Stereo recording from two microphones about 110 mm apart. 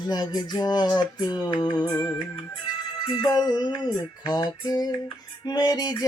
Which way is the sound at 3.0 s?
40° left (ahead or behind).